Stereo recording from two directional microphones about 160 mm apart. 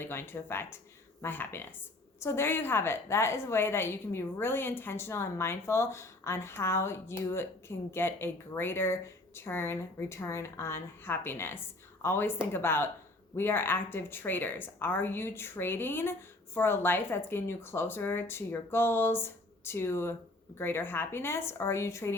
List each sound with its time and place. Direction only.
0.0 s a woman's voice: 15° left (ahead or behind)